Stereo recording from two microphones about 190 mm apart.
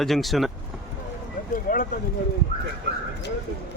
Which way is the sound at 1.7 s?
50° left (ahead or behind).